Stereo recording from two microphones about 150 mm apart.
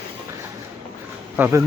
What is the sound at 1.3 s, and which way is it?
Speech, 15° right (ahead or behind).